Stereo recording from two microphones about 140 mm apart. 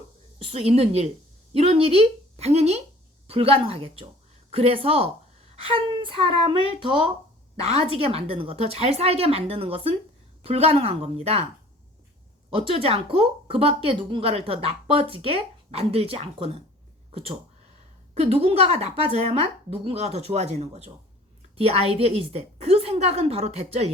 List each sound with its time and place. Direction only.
0.3 s speech: 45° right (ahead or behind)
5.6 s child singing: 40° right (ahead or behind)
7.5 s speech: 45° right (ahead or behind)
12.5 s speech: 40° right (ahead or behind)